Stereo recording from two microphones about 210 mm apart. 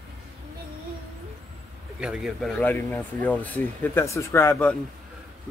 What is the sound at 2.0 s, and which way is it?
Speech, 5° right (ahead or behind).